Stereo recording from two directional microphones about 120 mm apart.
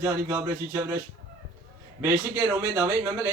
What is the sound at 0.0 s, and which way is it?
Speech, 20° right (ahead or behind).